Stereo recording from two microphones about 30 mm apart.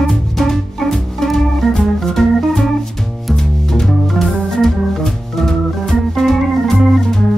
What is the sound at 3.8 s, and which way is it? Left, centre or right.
Organ, centre.